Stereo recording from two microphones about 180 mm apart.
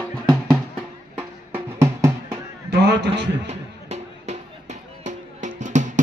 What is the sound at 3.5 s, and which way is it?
Music, 35° right (ahead or behind).